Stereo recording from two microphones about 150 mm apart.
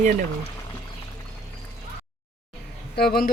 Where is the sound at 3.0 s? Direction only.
90° left.